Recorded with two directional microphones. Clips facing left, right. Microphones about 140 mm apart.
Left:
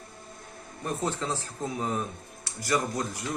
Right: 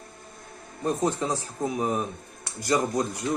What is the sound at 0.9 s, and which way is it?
A man's voice, 15° right (ahead or behind).